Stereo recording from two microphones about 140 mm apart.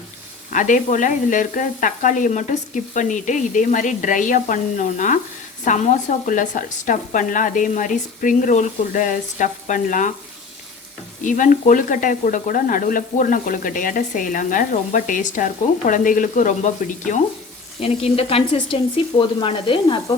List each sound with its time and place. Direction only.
0.5 s sizzle: 65° left (ahead or behind)
11.2 s sizzle: 65° left (ahead or behind)
17.7 s speech: 45° left (ahead or behind)
19.2 s sizzle: 35° left (ahead or behind)